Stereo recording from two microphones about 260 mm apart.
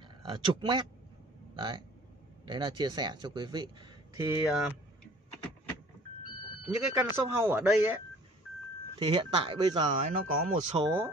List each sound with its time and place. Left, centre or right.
0.2 s speech: centre
6.8 s speech: centre
8.9 s speech: centre
10.8 s speech: centre